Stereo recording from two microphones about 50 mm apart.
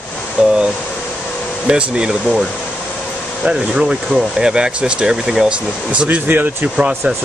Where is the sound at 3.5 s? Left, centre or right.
Centre.